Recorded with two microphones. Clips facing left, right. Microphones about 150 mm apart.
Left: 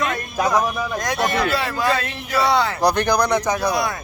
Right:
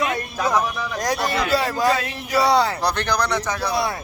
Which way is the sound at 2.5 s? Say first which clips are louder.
Right 1 dB; 35° right (ahead or behind).